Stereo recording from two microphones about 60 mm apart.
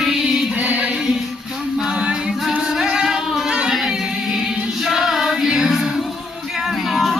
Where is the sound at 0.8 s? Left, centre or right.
Centre.